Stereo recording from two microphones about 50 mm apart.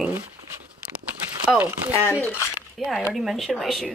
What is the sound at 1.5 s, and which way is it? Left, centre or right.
Speech, right.